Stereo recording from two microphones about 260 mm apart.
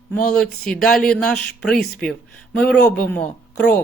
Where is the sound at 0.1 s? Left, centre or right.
Centre.